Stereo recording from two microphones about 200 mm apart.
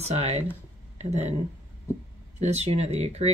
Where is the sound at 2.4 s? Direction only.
35° right (ahead or behind).